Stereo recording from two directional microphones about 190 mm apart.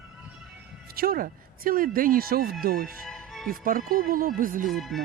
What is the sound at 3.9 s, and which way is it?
Speech, 50° right (ahead or behind).